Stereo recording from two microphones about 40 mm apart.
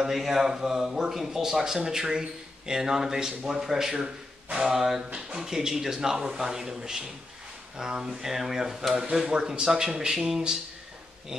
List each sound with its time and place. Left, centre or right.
0.0 s speech: centre